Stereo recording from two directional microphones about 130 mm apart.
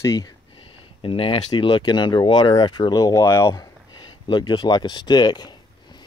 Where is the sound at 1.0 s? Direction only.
45° left (ahead or behind); by 3.6 s 20° left (ahead or behind).